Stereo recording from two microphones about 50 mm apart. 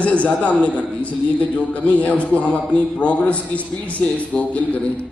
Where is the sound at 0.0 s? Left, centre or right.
Left.